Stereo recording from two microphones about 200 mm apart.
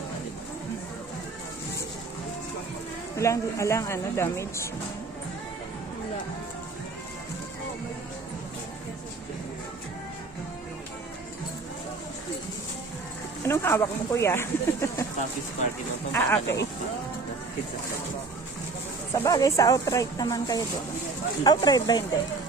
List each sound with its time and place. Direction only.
3.2 s a woman's voice: 15° left (ahead or behind)
13.5 s speech: 15° left (ahead or behind)
16.1 s a woman's voice: 10° left (ahead or behind)
19.1 s a woman's voice: 15° left (ahead or behind)